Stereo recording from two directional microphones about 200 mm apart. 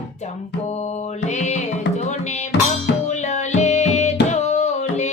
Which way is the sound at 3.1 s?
35° left (ahead or behind).